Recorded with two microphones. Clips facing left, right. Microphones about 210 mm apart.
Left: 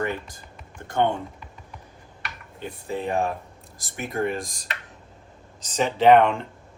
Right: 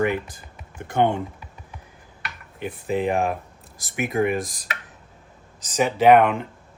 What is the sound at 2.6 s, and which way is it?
Speech, 15° right (ahead or behind).